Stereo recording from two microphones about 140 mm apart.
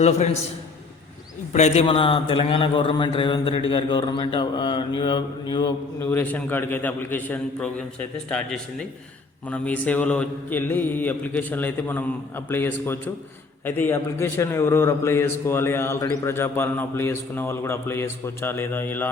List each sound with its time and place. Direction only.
1.5 s a man's voice: 55° left (ahead or behind); by 5.7 s 30° left (ahead or behind)
6.0 s a man's voice: 15° left (ahead or behind)